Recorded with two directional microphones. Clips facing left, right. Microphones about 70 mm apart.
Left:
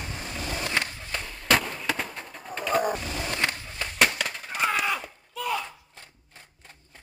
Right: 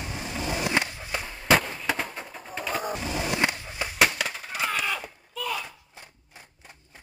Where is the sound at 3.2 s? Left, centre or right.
Centre.